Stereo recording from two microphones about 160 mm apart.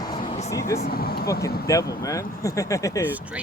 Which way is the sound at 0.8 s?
70° left (ahead or behind).